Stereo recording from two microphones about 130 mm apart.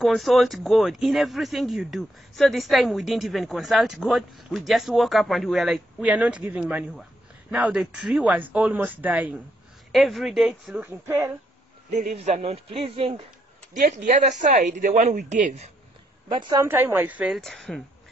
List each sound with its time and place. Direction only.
0.0 s speech: centre (ahead or behind)
9.9 s speech: centre (ahead or behind)
10.9 s speech: 20° right (ahead or behind)
11.9 s a man's voice: 60° right (ahead or behind)
13.7 s speech: 80° right
16.3 s a woman's voice: 35° right (ahead or behind)
16.6 s speech: 15° right (ahead or behind)
17.3 s speech: 5° left (ahead or behind)